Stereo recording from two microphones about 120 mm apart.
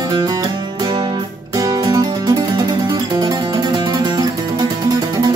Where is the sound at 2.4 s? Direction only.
40° right (ahead or behind).